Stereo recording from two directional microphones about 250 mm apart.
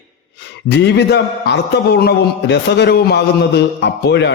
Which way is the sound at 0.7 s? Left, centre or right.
Left.